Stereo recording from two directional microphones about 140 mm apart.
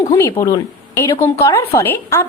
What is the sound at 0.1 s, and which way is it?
A woman's voice, 20° left (ahead or behind).